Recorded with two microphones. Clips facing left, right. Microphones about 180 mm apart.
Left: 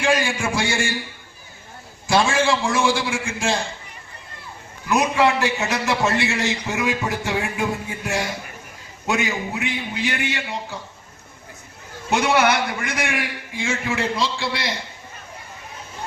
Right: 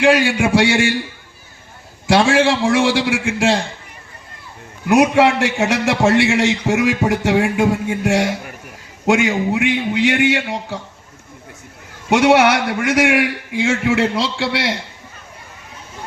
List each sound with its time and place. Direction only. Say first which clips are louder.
0.0 s a man's voice: right 7 dB; 70° right (ahead or behind)
2.0 s a man's voice: right 5 dB; 70° right (ahead or behind)
4.9 s a man's voice: right 6 dB; 70° right (ahead or behind)
12.1 s a man's voice: right 6 dB; 75° right (ahead or behind)